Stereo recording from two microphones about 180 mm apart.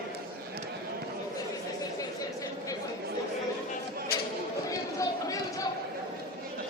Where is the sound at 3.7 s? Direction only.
55° left (ahead or behind).